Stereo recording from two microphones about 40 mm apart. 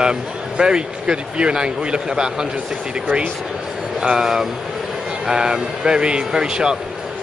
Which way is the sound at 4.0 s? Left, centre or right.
Centre.